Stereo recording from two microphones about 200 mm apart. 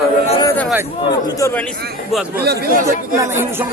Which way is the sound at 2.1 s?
5° right (ahead or behind).